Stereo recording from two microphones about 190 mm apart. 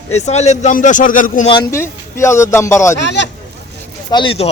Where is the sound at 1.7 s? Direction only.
15° left (ahead or behind).